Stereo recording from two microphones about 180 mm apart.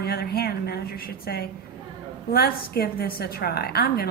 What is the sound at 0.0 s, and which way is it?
Speech, 60° left (ahead or behind).